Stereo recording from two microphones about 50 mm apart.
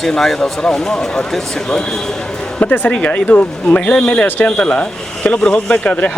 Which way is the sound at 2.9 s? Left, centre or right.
Left.